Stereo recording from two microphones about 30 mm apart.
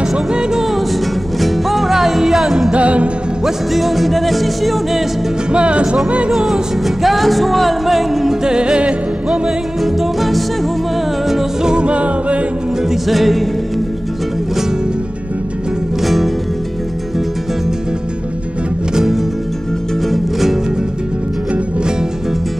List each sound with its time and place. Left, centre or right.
0.0 s music: right
1.4 s music: centre
2.7 s music: right
3.7 s music: centre
5.5 s music: right
6.3 s music: centre
8.5 s music: right
9.8 s music: centre
11.6 s music: right
13.1 s music: centre
16.0 s music: centre
20.1 s music: centre